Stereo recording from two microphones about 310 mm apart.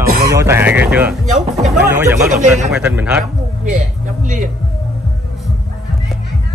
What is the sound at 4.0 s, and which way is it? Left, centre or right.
Music, right.